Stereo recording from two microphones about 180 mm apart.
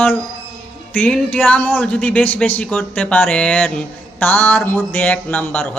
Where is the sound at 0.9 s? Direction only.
5° left (ahead or behind).